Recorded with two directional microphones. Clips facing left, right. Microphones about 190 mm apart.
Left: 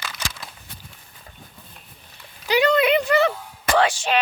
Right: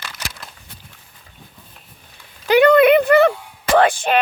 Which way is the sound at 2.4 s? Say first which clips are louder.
Right 7 dB; 55° right (ahead or behind).